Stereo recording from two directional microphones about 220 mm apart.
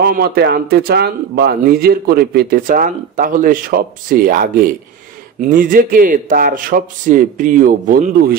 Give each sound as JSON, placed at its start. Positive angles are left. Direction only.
{"t": 0.0, "sound": "a man's voice", "side_deg": -45}